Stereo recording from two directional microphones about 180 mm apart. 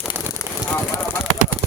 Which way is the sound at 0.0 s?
10° right (ahead or behind).